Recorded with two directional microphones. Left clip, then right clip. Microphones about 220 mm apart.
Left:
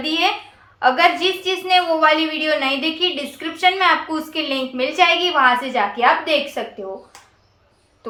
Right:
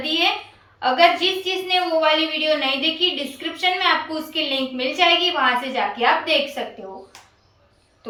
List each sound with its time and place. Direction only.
0.0 s a woman's voice: 20° left (ahead or behind)